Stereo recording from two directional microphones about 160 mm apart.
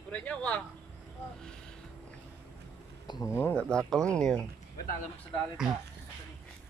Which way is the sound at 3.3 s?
15° left (ahead or behind).